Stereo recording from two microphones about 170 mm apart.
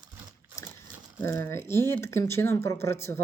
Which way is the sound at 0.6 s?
20° left (ahead or behind).